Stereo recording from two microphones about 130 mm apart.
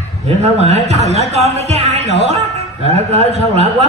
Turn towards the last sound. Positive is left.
turn(degrees=-55)  # may be behind; listen again after turning